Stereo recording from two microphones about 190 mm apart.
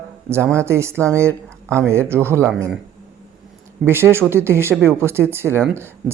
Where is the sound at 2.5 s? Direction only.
5° left (ahead or behind).